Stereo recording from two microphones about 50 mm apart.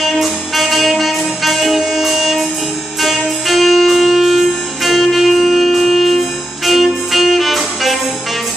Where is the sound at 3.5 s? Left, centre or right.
Centre.